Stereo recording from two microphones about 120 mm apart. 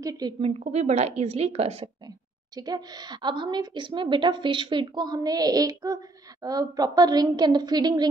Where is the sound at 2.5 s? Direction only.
35° right (ahead or behind).